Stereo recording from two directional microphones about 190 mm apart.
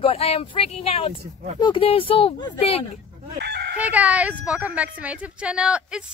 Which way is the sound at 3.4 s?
60° right (ahead or behind).